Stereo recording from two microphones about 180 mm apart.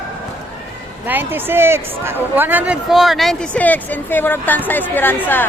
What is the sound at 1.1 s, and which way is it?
Speech, 10° right (ahead or behind).